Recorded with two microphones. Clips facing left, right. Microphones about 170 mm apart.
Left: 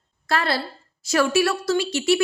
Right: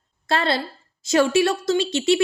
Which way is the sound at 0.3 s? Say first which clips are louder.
Right 2 dB; 25° right (ahead or behind).